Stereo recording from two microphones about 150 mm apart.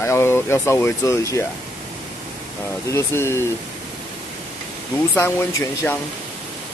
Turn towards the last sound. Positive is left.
turn(degrees=15)  # may be behind; listen again after turning